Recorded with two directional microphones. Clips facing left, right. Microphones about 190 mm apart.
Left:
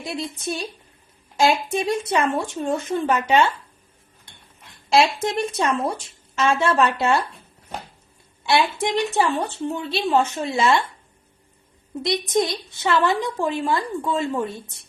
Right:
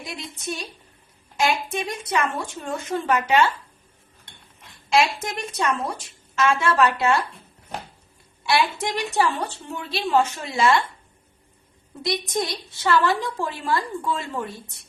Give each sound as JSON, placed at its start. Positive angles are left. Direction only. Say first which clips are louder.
{"t": 0.0, "sound": "a woman's voice", "louder": "left 5 dB", "side_deg": 30}
{"t": 4.9, "sound": "a woman's voice", "louder": "left 3 dB", "side_deg": 30}
{"t": 8.4, "sound": "a woman's voice", "louder": "left 2 dB", "side_deg": 25}
{"t": 12.0, "sound": "a woman's voice", "louder": "left 4 dB", "side_deg": 20}